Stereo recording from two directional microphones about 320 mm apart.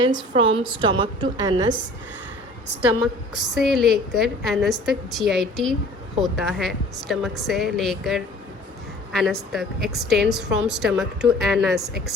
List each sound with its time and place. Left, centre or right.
0.1 s a woman's voice: centre
3.3 s a woman's voice: centre